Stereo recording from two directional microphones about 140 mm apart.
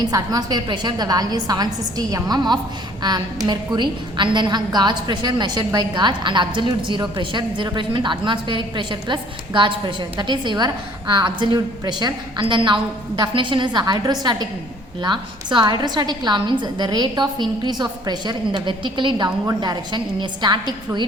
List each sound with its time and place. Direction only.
0.0 s a woman's voice: 25° right (ahead or behind)